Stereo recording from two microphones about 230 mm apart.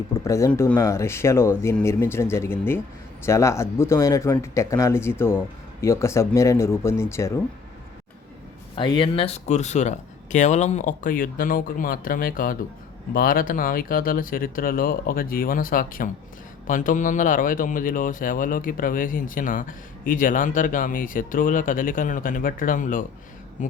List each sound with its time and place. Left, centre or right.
0.1 s speech: centre
8.7 s speech: left